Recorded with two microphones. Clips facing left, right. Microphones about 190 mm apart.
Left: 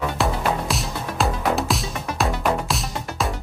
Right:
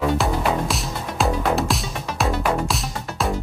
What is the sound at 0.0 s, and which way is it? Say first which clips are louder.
Music: right 2 dB; centre (ahead or behind).